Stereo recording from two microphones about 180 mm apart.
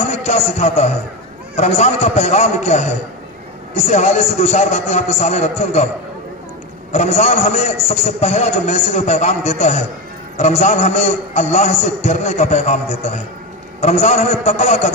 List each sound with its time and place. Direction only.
0.1 s a man's voice: 35° left (ahead or behind)
6.9 s a man's voice: 40° left (ahead or behind)